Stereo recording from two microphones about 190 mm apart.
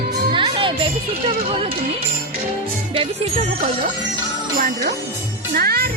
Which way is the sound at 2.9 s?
30° right (ahead or behind).